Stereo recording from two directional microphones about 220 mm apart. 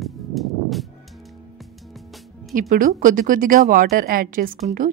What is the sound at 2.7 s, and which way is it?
A woman's voice, 35° right (ahead or behind).